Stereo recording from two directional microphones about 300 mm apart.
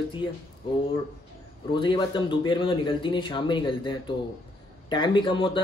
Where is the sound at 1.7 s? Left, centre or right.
Centre.